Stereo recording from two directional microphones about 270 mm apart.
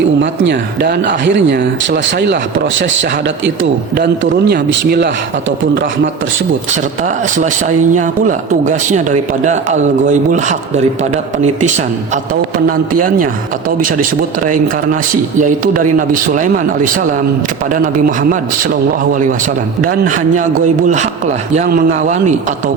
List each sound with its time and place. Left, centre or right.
0.2 s speech: right
7.0 s a man's voice: right
13.7 s speech: right
15.1 s a man's voice: right
19.8 s a man's voice: right